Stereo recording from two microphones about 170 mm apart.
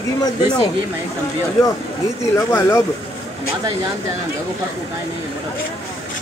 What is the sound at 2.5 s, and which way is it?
Speech, 15° left (ahead or behind).